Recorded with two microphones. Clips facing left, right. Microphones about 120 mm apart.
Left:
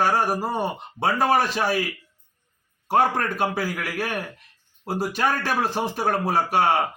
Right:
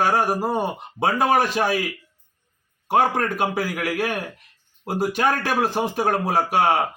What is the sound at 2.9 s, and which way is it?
A man's voice, centre (ahead or behind).